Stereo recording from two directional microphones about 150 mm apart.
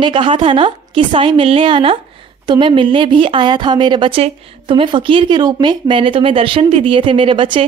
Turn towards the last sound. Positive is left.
turn(degrees=-35)  # may be behind; listen again after turning